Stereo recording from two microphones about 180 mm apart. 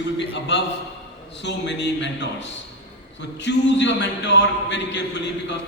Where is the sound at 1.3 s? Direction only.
80° left.